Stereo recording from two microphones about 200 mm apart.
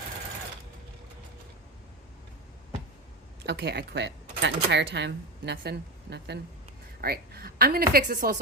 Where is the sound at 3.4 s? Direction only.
55° right (ahead or behind).